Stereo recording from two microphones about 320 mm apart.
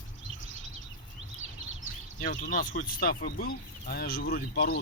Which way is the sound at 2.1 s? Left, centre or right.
Left.